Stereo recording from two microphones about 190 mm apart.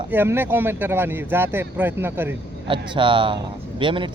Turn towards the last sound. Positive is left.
turn(degrees=-25)  # may be behind; listen again after turning